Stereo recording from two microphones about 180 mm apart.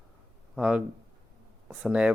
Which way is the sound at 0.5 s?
5° right (ahead or behind).